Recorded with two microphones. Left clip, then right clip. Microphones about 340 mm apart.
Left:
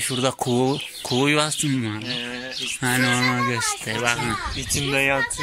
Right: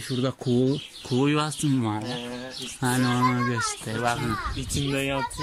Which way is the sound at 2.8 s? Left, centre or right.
Centre.